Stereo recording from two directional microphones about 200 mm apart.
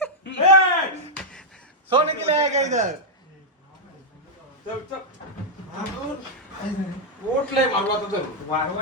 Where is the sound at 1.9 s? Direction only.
30° right (ahead or behind).